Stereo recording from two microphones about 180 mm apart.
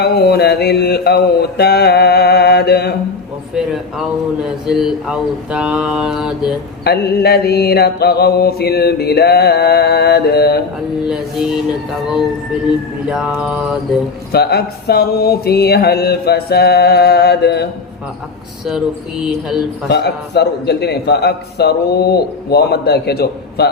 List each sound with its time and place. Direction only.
0.0 s mantra: 65° left (ahead or behind)
3.5 s speech: 5° right (ahead or behind)
6.8 s a man's voice: 65° left (ahead or behind)
11.0 s speech: 5° right (ahead or behind)
14.3 s a man's voice: 60° left (ahead or behind)
19.2 s speech: 5° right (ahead or behind)
19.9 s a man's voice: 65° left (ahead or behind)